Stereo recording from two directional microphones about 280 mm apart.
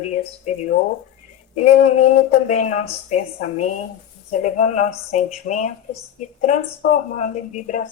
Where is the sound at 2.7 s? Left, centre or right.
Left.